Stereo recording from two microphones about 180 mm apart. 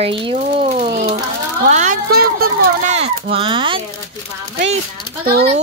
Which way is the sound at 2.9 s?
40° right (ahead or behind).